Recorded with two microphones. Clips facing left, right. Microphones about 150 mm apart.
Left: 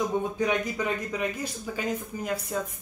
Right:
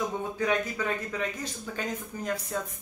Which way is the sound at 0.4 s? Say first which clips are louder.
Left 1 dB; 15° left (ahead or behind).